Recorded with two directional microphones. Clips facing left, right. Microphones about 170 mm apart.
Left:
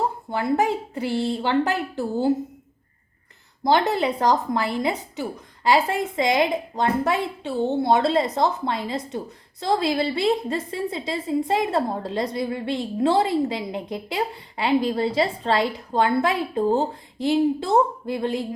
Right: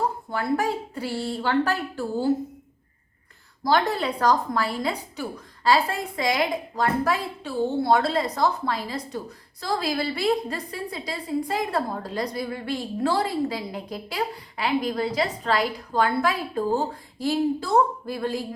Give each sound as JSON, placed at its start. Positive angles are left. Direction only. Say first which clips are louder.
{"t": 0.3, "sound": "a woman's voice", "louder": "left 5 dB", "side_deg": 20}
{"t": 3.6, "sound": "a woman's voice", "louder": "left 3 dB", "side_deg": 20}